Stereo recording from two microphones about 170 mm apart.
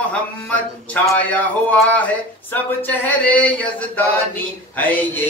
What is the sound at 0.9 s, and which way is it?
Mantra, 10° left (ahead or behind).